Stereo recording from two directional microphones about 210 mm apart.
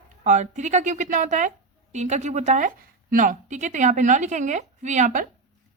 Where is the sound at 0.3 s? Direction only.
35° right (ahead or behind).